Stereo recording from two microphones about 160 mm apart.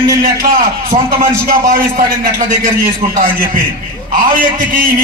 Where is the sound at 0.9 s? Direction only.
55° right (ahead or behind).